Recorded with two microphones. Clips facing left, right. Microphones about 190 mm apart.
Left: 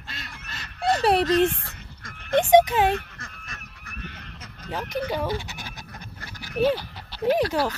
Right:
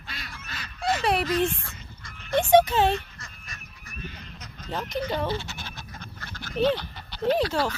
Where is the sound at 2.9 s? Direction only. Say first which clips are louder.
Left 1 dB; 55° left (ahead or behind).